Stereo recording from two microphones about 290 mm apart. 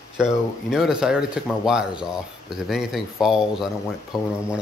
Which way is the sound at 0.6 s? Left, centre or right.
Centre.